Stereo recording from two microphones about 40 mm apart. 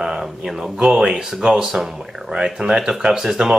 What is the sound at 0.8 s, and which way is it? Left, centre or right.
A man's voice, centre.